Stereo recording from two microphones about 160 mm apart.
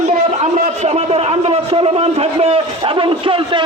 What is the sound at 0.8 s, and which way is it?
A man's voice, 40° right (ahead or behind).